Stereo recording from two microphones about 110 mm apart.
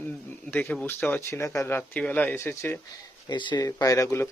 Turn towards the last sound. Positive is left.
turn(degrees=25)  # may be behind; listen again after turning